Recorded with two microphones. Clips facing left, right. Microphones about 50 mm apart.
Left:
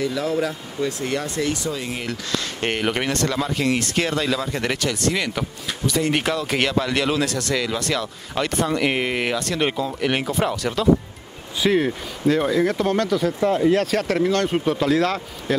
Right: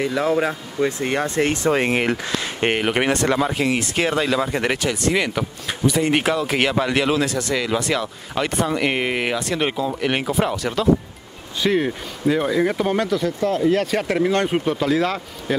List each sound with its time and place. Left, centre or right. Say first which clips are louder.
0.0 s speech: right 3 dB; right
2.0 s speech: right 4 dB; right
13.4 s speech: left 2 dB; centre
13.7 s speech: even; centre
14.6 s speech: even; centre